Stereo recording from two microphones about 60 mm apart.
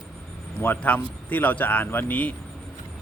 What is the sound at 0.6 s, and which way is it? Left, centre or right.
Speech, left.